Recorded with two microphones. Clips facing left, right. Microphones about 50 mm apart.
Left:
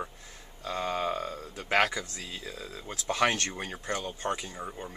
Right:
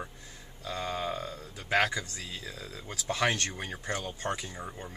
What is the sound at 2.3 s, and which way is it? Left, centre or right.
Speech, left.